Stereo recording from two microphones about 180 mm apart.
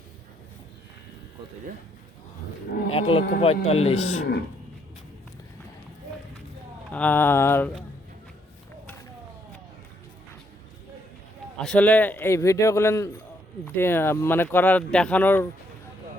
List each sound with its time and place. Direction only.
2.9 s speech: 30° left (ahead or behind)
6.9 s speech: 10° left (ahead or behind)
11.6 s speech: 5° left (ahead or behind)